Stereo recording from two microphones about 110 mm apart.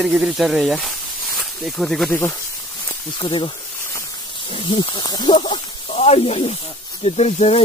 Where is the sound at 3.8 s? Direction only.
25° left (ahead or behind).